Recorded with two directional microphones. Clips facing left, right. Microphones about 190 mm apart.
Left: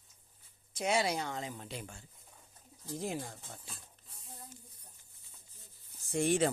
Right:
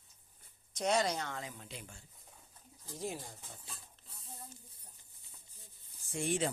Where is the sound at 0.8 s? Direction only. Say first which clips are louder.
Left 1 dB; 10° left (ahead or behind).